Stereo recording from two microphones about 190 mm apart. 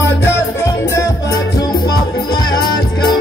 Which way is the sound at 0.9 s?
15° left (ahead or behind).